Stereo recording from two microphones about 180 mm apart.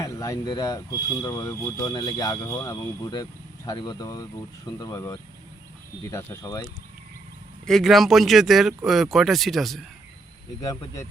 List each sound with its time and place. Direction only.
0.0 s speech: 20° left (ahead or behind)
7.7 s speech: centre (ahead or behind)
10.6 s speech: 20° left (ahead or behind)